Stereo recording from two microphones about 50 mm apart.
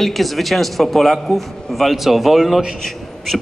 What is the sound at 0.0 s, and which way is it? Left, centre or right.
Speech, centre.